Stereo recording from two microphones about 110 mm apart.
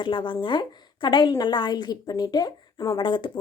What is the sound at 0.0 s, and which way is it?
A woman's voice, 45° left (ahead or behind).